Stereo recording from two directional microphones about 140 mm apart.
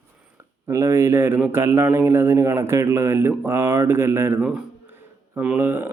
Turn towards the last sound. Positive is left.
turn(degrees=-15)  # may be behind; listen again after turning